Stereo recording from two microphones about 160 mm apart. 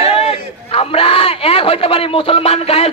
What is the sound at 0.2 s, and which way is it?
A man's voice, 35° left (ahead or behind).